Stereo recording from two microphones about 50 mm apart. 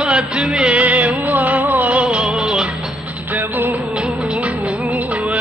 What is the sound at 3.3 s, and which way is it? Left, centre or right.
Music, right.